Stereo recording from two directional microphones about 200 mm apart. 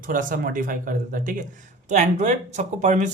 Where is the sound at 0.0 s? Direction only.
40° right (ahead or behind).